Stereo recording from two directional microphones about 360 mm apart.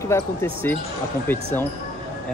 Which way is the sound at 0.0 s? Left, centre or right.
Centre.